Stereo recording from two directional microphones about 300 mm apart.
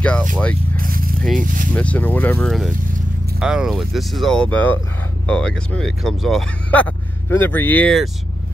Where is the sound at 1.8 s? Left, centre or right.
Centre.